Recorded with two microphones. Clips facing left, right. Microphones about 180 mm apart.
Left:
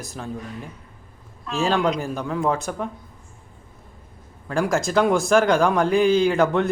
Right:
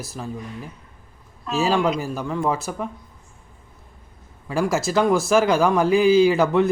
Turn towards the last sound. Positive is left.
turn(degrees=-5)  # may be behind; listen again after turning